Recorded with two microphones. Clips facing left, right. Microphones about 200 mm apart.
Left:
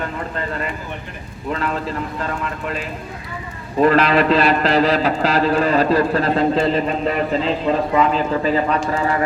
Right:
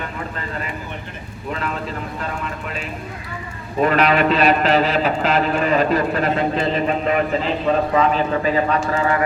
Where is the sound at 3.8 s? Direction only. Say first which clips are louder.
Left 2 dB; 35° left (ahead or behind).